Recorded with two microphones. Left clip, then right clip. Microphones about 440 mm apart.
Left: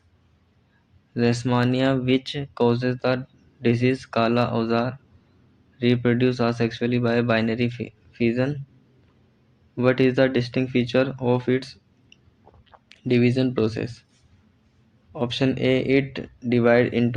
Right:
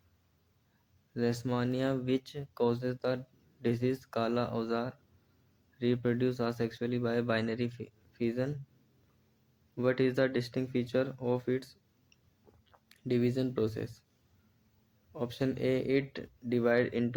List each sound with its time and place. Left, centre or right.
1.1 s speech: right
9.7 s speech: right
15.1 s speech: right